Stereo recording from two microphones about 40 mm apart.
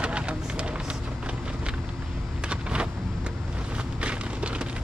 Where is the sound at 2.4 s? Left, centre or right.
Right.